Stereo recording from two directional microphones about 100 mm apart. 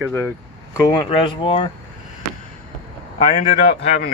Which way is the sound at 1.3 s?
60° left (ahead or behind).